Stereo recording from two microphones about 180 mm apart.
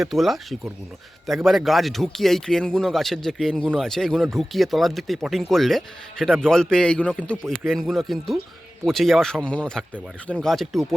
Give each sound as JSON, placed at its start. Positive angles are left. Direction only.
{"t": 0.0, "sound": "speech", "side_deg": 0}